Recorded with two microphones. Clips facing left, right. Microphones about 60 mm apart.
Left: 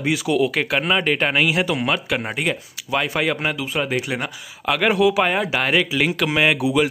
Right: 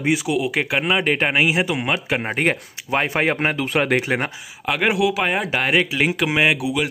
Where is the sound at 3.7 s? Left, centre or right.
Right.